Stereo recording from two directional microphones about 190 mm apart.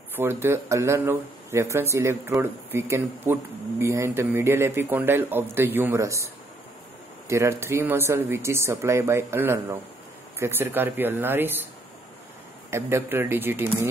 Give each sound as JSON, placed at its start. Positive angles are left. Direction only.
{"t": 0.1, "sound": "speech", "side_deg": -10}
{"t": 7.2, "sound": "speech", "side_deg": -15}
{"t": 12.7, "sound": "speech", "side_deg": -10}